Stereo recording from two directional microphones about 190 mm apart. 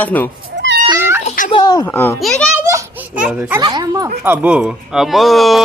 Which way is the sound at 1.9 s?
10° left (ahead or behind).